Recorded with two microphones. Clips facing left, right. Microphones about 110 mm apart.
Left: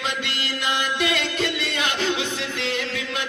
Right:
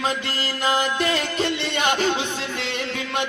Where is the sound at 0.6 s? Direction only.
35° right (ahead or behind).